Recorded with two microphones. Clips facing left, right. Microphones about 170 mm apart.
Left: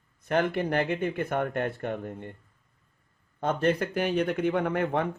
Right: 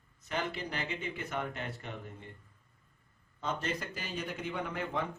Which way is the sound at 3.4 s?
55° left (ahead or behind).